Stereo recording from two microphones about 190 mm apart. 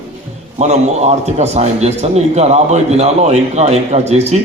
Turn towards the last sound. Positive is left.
turn(degrees=-35)  # may be behind; listen again after turning